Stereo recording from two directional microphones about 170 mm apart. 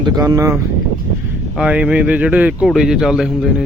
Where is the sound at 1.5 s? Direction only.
5° right (ahead or behind).